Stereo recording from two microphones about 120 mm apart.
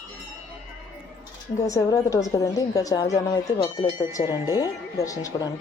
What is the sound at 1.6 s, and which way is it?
Speech, 30° left (ahead or behind).